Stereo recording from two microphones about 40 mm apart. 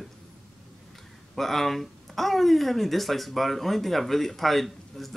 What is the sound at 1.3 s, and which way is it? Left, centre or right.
Speech, centre.